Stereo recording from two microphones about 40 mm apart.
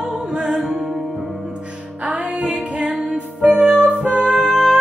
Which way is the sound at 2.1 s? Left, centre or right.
Right.